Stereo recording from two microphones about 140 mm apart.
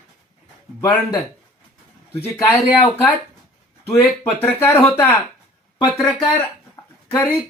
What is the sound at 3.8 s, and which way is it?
Speech, 20° left (ahead or behind).